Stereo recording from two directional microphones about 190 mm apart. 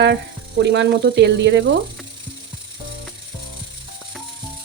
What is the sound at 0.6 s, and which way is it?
Speech, 65° right (ahead or behind).